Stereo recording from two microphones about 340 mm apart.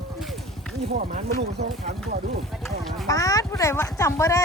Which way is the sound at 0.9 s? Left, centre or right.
Right.